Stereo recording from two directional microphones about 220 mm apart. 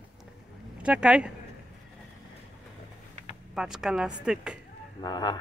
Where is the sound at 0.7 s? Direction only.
5° right (ahead or behind).